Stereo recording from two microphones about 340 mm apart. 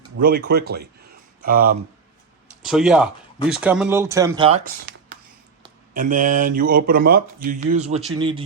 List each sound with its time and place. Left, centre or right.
0.2 s speech: right
2.6 s speech: centre